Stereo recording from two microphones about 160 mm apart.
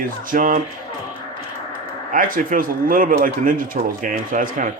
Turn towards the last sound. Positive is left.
turn(degrees=-55)  # may be behind; listen again after turning